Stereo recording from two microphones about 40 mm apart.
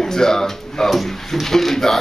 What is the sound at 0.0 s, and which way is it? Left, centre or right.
Speech, centre.